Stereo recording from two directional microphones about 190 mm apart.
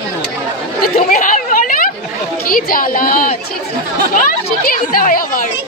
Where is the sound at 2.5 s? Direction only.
50° left (ahead or behind).